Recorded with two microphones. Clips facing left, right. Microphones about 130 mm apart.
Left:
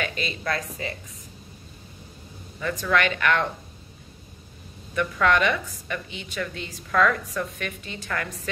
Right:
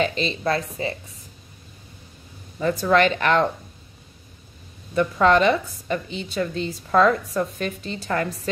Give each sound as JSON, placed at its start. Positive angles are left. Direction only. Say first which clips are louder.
{"t": 0.0, "sound": "a woman's voice", "louder": "right 7 dB", "side_deg": -25}
{"t": 2.6, "sound": "a woman's voice", "louder": "right 5 dB", "side_deg": -35}
{"t": 4.9, "sound": "a woman's voice", "louder": "right 5 dB", "side_deg": -30}